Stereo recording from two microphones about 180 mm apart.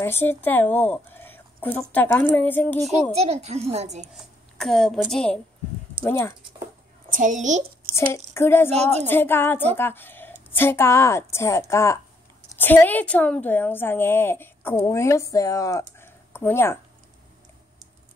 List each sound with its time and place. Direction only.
0.0 s speech: 15° left (ahead or behind)
2.9 s a child's voice: 35° right (ahead or behind)
4.1 s a woman's voice: centre (ahead or behind)
7.1 s a child's voice: 45° right (ahead or behind)
7.9 s a woman's voice: 15° left (ahead or behind)